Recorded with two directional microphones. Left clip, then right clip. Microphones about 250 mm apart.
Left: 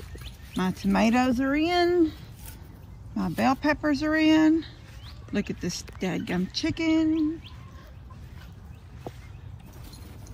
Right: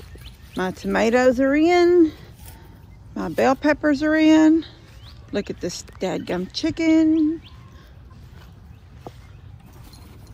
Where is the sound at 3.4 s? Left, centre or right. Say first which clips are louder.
Right 6 dB; right.